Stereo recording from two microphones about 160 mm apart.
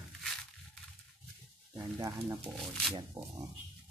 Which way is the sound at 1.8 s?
20° right (ahead or behind).